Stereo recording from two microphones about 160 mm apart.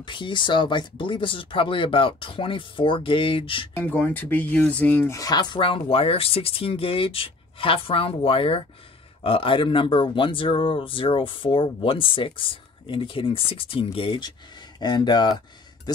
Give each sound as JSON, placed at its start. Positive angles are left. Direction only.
{"t": 0.0, "sound": "speech", "side_deg": 30}
{"t": 3.7, "sound": "speech", "side_deg": 10}